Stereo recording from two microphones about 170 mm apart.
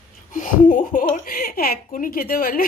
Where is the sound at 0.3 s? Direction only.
50° left (ahead or behind).